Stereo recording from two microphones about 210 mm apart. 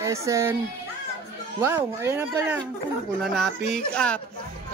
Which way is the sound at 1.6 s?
10° right (ahead or behind).